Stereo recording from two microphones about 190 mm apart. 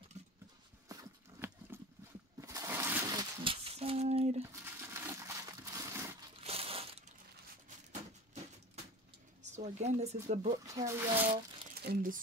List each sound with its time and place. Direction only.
0.2 s clip-clop: 35° right (ahead or behind)
0.8 s a sound: 15° right (ahead or behind); by 4.4 s 35° right (ahead or behind)
4.5 s crumpling: 15° right (ahead or behind)
6.4 s crumpling: 30° right (ahead or behind)
9.4 s speech: 40° right (ahead or behind)
10.5 s speech: 20° right (ahead or behind)
11.8 s speech: 50° right (ahead or behind)